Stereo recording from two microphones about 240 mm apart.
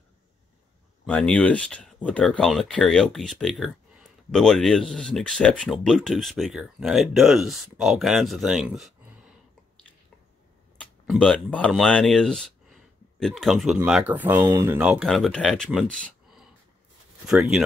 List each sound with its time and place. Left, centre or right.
1.0 s speech: centre
10.8 s speech: centre